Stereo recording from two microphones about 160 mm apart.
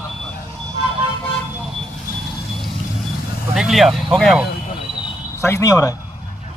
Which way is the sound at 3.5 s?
5° right (ahead or behind).